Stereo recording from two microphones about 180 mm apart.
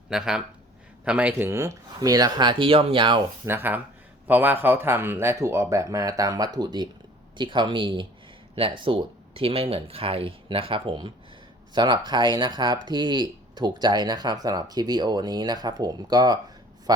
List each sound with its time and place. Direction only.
0.1 s speech: 5° right (ahead or behind); by 3.2 s 30° right (ahead or behind)
3.4 s speech: 10° right (ahead or behind)